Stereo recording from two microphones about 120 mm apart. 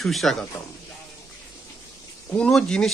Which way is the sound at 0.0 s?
Centre (ahead or behind).